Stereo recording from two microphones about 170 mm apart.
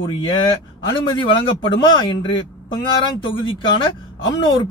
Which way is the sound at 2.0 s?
30° left (ahead or behind).